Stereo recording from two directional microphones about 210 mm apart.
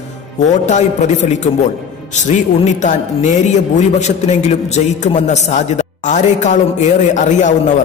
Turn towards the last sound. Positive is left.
turn(degrees=35)  # may be behind; listen again after turning